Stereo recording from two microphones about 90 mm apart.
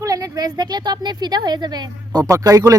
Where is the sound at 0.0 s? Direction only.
40° right (ahead or behind).